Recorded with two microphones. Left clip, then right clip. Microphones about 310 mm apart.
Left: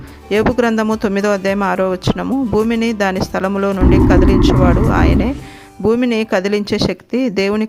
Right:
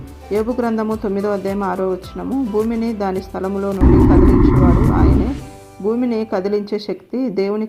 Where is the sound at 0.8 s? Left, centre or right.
Left.